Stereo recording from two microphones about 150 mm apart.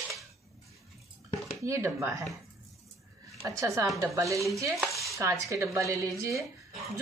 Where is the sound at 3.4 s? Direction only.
20° right (ahead or behind).